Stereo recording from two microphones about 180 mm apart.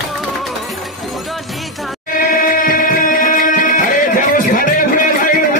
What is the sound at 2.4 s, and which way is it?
Music, 50° left (ahead or behind).